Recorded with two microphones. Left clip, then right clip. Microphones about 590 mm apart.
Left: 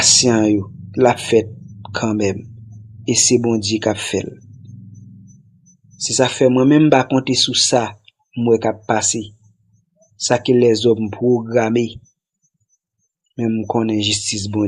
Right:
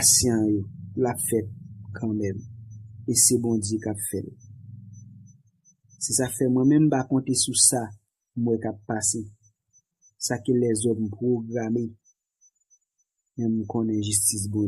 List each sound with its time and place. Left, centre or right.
0.0 s speech: right
6.0 s speech: right
10.2 s speech: right
13.3 s speech: right